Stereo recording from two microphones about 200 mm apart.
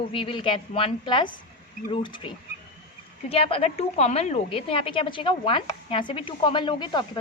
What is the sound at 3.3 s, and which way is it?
A woman's voice, 30° left (ahead or behind).